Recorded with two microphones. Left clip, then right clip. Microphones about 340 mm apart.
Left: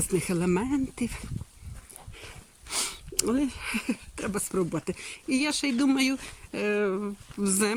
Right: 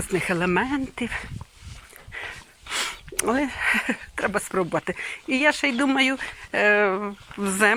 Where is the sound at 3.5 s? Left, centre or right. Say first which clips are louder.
Right 10 dB; centre.